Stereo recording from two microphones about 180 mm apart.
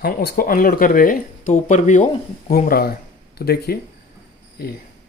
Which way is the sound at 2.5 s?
55° left (ahead or behind).